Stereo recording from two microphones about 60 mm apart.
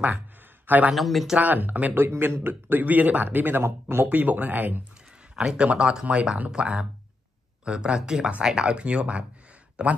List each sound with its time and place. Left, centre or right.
0.7 s speech: right
0.9 s speech: centre
1.4 s speech: right
4.1 s speech: right
5.3 s speech: centre